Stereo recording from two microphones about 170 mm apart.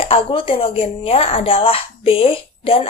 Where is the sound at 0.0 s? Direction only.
30° left (ahead or behind).